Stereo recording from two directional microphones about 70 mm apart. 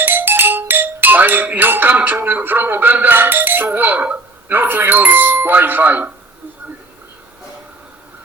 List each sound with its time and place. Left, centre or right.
0.0 s speech: right